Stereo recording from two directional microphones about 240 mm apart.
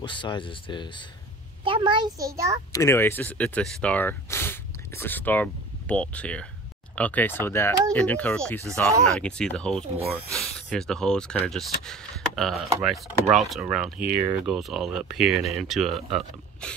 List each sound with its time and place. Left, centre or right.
0.0 s speech: centre
1.6 s a child's voice: right
2.7 s speech: centre